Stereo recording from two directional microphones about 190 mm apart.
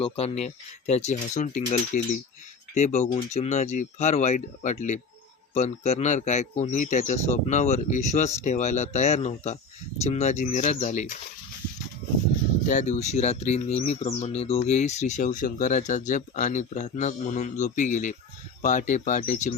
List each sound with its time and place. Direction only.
0.0 s speech: 30° left (ahead or behind)
12.6 s speech: 40° left (ahead or behind)